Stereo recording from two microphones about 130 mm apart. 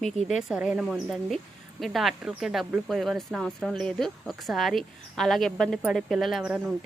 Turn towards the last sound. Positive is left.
turn(degrees=-10)  # may be behind; listen again after turning